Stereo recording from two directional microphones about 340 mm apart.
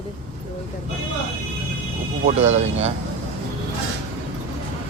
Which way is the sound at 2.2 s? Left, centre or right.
Centre.